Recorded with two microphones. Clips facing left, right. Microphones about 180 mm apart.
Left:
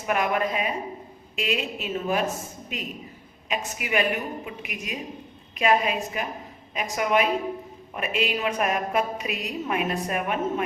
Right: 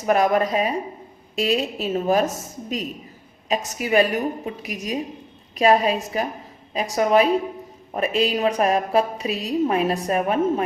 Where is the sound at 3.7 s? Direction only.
35° right (ahead or behind).